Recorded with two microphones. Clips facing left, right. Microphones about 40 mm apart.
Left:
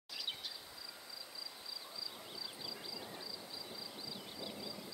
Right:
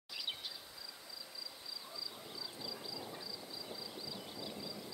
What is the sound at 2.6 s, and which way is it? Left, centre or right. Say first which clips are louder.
Vehicle: right 4 dB; centre.